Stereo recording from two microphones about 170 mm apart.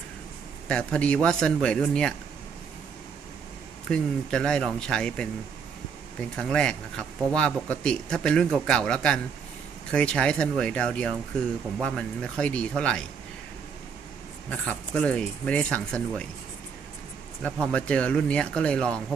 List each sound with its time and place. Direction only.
0.7 s speech: 5° left (ahead or behind)
3.8 s speech: 5° left (ahead or behind)
14.5 s speech: 10° left (ahead or behind)
17.4 s speech: 5° left (ahead or behind)